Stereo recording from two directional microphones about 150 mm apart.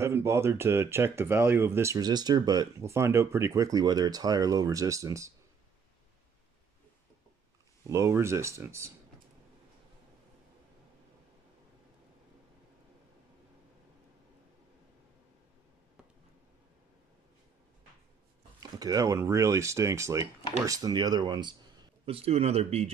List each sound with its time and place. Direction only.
0.0 s speech: 20° right (ahead or behind)
7.8 s speech: 20° right (ahead or behind)
18.6 s speech: 25° right (ahead or behind)
22.0 s speech: 40° right (ahead or behind)